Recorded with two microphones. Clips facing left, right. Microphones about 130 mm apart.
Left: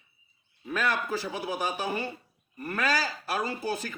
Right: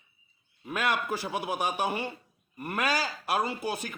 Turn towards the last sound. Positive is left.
turn(degrees=-15)  # may be behind; listen again after turning